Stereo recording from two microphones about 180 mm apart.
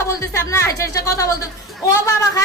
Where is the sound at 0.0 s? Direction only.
15° left (ahead or behind).